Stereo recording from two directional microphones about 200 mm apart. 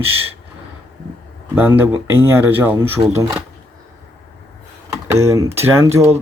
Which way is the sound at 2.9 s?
30° right (ahead or behind).